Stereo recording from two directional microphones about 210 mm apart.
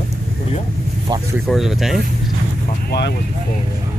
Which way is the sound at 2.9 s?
50° left (ahead or behind).